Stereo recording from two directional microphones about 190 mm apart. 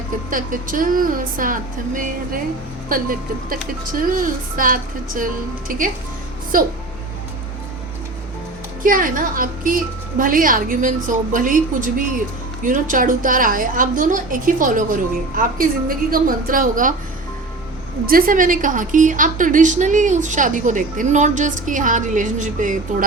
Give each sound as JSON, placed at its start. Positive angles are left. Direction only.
{"t": 0.3, "sound": "a woman's voice", "side_deg": -45}
{"t": 8.8, "sound": "a woman's voice", "side_deg": -45}
{"t": 18.0, "sound": "a woman's voice", "side_deg": -50}